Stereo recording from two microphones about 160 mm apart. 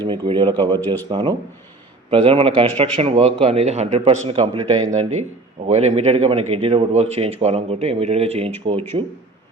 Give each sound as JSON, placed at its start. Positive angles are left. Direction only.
{"t": 0.0, "sound": "a man's voice", "side_deg": -30}
{"t": 2.0, "sound": "a man's voice", "side_deg": -35}
{"t": 4.9, "sound": "a man's voice", "side_deg": -45}